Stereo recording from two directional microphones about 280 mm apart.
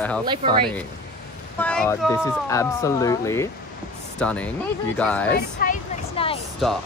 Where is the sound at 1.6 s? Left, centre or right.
Centre.